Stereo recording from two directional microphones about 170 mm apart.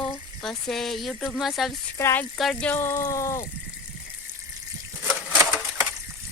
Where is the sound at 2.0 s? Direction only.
15° left (ahead or behind).